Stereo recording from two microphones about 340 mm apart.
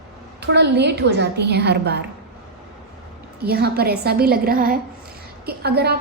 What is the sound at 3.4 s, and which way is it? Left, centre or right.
A woman's voice, right.